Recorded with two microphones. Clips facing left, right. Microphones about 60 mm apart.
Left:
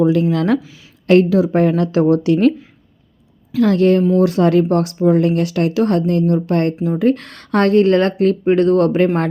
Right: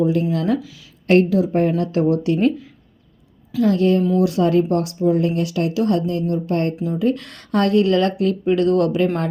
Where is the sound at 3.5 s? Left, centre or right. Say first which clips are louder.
Left 4 dB; left.